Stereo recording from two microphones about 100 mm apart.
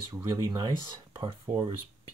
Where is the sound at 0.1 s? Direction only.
40° right (ahead or behind).